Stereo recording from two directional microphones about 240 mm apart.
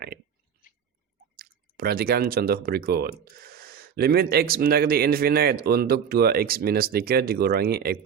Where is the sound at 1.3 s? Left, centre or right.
Right.